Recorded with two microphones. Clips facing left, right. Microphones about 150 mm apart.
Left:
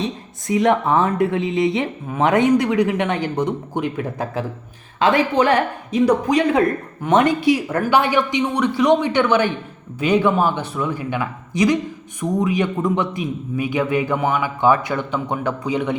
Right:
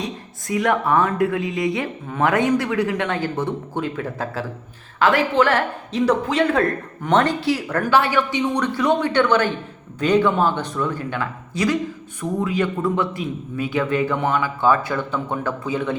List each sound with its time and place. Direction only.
0.4 s a woman's voice: 20° left (ahead or behind)